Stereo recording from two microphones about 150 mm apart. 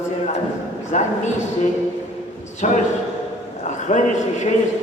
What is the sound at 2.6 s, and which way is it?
Speech, 55° left (ahead or behind).